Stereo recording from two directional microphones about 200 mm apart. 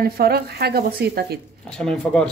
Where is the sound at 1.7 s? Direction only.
5° left (ahead or behind).